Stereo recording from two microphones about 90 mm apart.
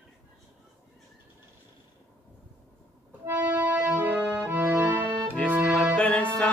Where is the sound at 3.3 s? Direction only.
25° right (ahead or behind).